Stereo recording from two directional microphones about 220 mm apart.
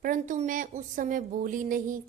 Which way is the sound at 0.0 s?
35° right (ahead or behind).